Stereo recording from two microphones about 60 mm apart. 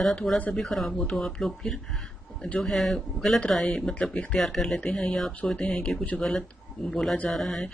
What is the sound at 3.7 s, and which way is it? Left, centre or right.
Speech, centre.